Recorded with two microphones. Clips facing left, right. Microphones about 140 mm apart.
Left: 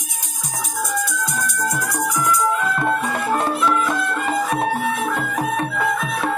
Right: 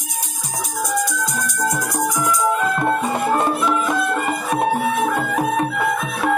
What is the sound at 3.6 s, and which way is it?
Music, 15° right (ahead or behind).